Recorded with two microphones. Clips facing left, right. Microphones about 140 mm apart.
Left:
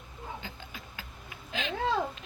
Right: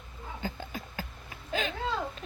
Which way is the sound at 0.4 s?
40° right (ahead or behind).